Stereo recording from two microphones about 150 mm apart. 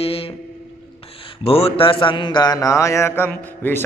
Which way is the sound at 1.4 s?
40° left (ahead or behind).